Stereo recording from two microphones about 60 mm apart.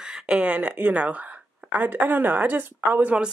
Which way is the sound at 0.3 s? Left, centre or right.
Right.